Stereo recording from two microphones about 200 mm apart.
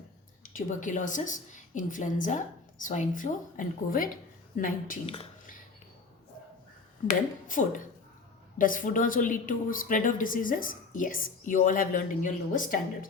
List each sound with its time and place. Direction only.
0.4 s a woman's voice: 40° left (ahead or behind)
5.0 s speech: 25° left (ahead or behind)
7.1 s a woman's voice: 40° left (ahead or behind)